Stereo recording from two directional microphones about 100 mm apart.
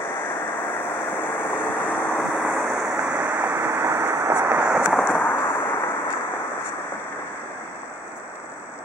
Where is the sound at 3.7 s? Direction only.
25° right (ahead or behind).